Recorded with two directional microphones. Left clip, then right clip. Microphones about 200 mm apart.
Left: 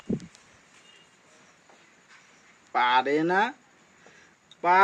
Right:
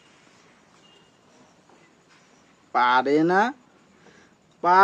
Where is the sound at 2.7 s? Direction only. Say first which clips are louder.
Right 3 dB; 5° right (ahead or behind).